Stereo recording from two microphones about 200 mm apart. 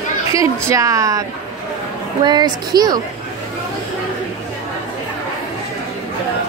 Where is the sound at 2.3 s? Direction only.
20° right (ahead or behind).